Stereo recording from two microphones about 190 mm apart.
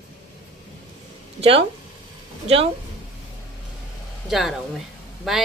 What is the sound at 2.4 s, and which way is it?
Speech, 30° right (ahead or behind).